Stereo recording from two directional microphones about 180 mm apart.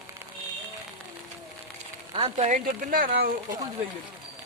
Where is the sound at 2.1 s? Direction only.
30° right (ahead or behind).